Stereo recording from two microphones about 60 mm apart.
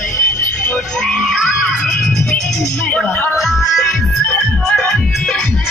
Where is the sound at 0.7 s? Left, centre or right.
Centre.